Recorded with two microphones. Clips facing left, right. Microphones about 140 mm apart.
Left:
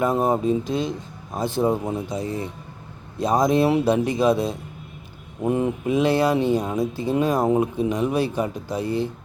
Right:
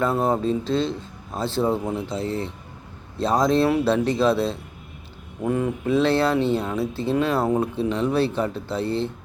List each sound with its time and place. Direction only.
0.0 s speech: 15° left (ahead or behind)